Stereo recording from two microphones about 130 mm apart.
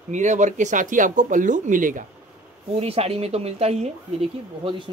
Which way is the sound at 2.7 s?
50° right (ahead or behind).